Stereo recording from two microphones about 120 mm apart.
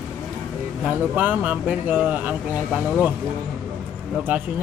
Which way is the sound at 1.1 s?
15° right (ahead or behind).